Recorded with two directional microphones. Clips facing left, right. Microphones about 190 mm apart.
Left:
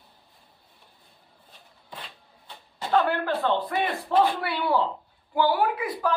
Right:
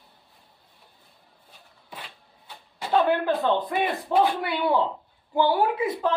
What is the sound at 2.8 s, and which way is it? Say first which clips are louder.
Speech: right 2 dB; 15° right (ahead or behind).